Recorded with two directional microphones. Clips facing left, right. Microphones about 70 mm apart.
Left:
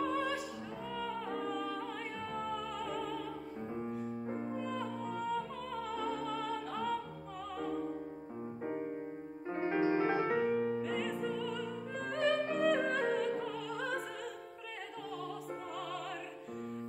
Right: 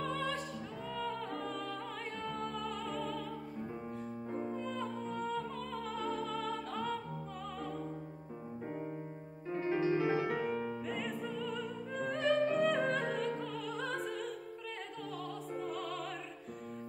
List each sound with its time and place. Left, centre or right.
0.0 s music: centre
4.6 s music: centre
9.5 s music: left
10.4 s music: centre
15.6 s music: centre